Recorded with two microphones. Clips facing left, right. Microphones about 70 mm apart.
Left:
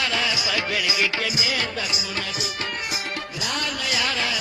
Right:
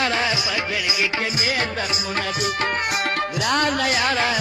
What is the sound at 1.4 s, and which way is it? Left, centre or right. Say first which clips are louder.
Music: right 3 dB; right.